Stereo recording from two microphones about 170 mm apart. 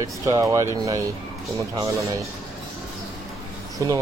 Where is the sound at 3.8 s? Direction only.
15° right (ahead or behind).